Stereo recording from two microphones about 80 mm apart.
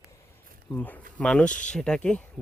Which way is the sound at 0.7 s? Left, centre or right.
Centre.